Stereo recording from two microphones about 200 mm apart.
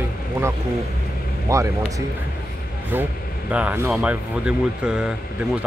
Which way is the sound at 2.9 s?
10° right (ahead or behind).